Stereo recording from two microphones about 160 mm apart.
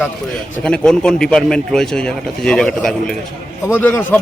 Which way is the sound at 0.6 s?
5° left (ahead or behind).